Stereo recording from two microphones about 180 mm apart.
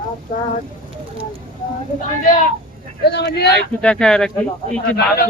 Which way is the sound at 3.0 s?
65° left (ahead or behind).